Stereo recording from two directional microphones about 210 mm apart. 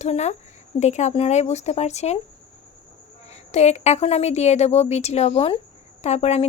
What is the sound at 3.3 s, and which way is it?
Speech, 30° left (ahead or behind).